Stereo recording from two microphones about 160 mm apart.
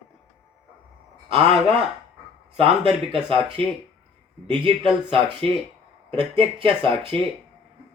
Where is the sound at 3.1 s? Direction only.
35° right (ahead or behind).